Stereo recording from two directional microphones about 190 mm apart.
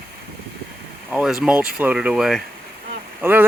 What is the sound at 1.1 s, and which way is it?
Speech, 5° right (ahead or behind).